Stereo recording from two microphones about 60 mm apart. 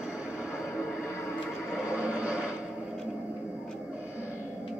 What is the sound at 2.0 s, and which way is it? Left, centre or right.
Television, right.